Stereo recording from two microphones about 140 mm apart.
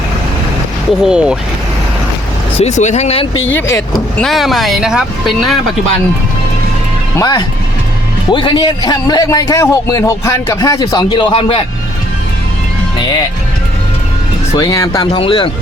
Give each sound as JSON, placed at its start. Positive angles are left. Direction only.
{"t": 1.0, "sound": "speech", "side_deg": -5}
{"t": 2.6, "sound": "speech", "side_deg": 55}
{"t": 3.4, "sound": "a man's voice", "side_deg": 15}
{"t": 4.2, "sound": "speech", "side_deg": 0}
{"t": 7.2, "sound": "a man's voice", "side_deg": 30}
{"t": 14.5, "sound": "a man's voice", "side_deg": 25}
{"t": 15.2, "sound": "speech", "side_deg": 35}